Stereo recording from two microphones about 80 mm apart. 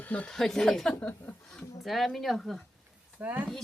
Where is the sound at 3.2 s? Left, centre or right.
Right.